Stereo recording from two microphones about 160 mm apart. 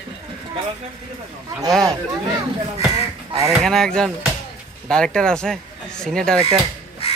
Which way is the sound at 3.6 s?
5° left (ahead or behind).